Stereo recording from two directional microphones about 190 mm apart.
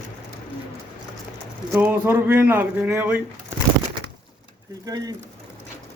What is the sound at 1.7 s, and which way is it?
Speech, 10° right (ahead or behind).